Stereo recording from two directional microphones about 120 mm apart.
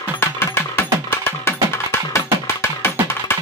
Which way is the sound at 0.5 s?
20° left (ahead or behind).